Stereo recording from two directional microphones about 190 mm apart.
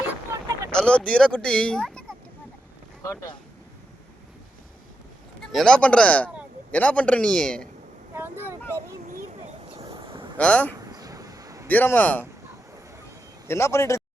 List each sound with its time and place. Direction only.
0.3 s boat: 15° right (ahead or behind)
0.7 s speech: 5° left (ahead or behind)
3.0 s speech: 15° left (ahead or behind)
5.5 s a man's voice: centre (ahead or behind)
8.1 s speech: 10° right (ahead or behind)
9.7 s a sound: 30° right (ahead or behind)
10.3 s a man's voice: 5° left (ahead or behind)
10.8 s a sound: 20° right (ahead or behind)
11.7 s a man's voice: 10° left (ahead or behind)
13.5 s a man's voice: 15° left (ahead or behind)